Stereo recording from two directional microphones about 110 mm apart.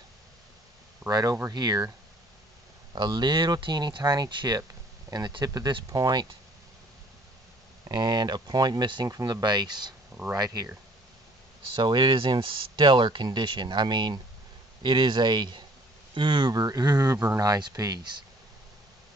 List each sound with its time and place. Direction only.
1.1 s speech: 30° right (ahead or behind)
2.9 s speech: 45° right (ahead or behind)
7.8 s speech: 40° right (ahead or behind)
11.7 s speech: 40° right (ahead or behind)